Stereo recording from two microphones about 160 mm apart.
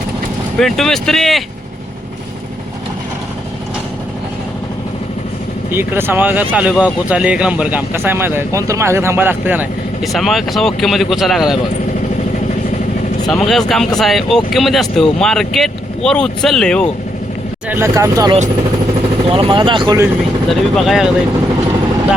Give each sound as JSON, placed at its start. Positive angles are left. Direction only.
{"t": 0.6, "sound": "speech", "side_deg": 5}
{"t": 5.7, "sound": "speech", "side_deg": -15}
{"t": 10.0, "sound": "speech", "side_deg": 0}
{"t": 13.2, "sound": "speech", "side_deg": 5}
{"t": 17.7, "sound": "speech", "side_deg": -15}
{"t": 19.3, "sound": "speech", "side_deg": -30}
{"t": 20.5, "sound": "speech", "side_deg": 0}